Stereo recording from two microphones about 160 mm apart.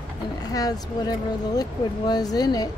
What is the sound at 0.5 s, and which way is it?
Speech, 25° left (ahead or behind).